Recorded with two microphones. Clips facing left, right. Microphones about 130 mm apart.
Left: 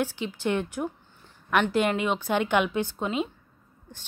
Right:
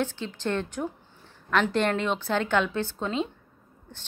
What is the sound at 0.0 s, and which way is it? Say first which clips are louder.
A woman's voice: left 1 dB; 10° left (ahead or behind).